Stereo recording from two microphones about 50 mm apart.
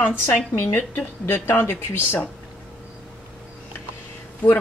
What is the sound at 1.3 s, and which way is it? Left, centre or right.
Speech, left.